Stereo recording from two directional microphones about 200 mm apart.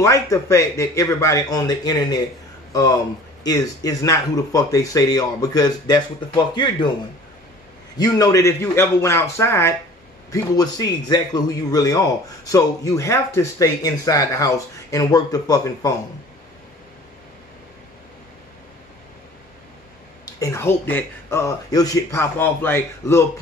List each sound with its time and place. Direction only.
0.0 s a man's voice: 15° left (ahead or behind)
3.4 s a man's voice: 15° left (ahead or behind)
8.0 s a man's voice: 15° left (ahead or behind)
20.2 s a man's voice: 15° left (ahead or behind)